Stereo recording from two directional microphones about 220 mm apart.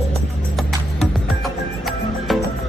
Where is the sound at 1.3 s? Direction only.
Centre (ahead or behind).